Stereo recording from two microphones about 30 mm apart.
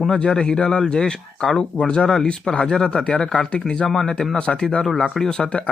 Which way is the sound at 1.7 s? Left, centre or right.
Left.